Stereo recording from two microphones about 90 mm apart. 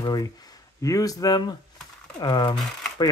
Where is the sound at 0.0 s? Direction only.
50° left (ahead or behind).